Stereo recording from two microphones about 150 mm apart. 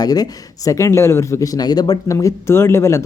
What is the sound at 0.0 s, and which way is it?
Speech, 25° left (ahead or behind).